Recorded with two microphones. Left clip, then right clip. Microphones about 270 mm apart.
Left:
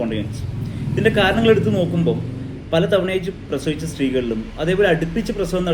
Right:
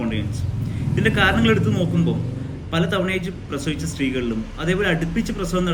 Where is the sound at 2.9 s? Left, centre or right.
Centre.